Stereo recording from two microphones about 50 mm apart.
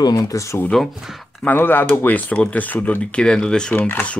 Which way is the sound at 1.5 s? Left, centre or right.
Left.